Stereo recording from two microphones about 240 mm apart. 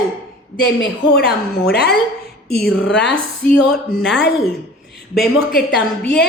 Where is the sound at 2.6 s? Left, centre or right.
Centre.